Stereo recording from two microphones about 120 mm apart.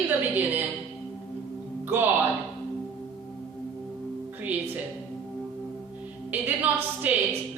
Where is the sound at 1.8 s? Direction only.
15° right (ahead or behind).